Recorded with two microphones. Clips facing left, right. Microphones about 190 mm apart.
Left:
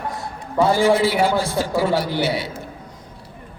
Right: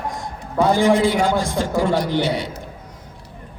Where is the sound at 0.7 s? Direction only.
15° right (ahead or behind).